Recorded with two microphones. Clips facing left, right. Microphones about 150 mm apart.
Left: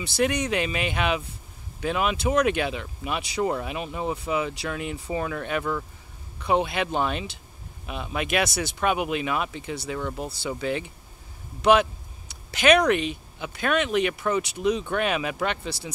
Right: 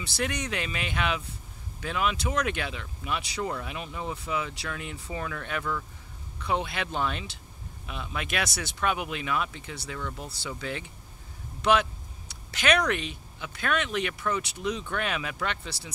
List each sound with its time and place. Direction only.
0.0 s speech: 15° left (ahead or behind)
6.4 s speech: 15° left (ahead or behind)
9.9 s speech: 25° left (ahead or behind)
10.6 s speech: 15° left (ahead or behind)